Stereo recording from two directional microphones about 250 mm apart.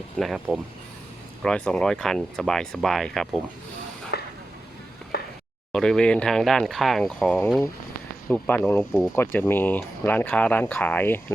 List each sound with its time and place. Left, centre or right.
0.2 s speech: centre
4.1 s chopping: left
5.1 s a sound: left
5.7 s speech: centre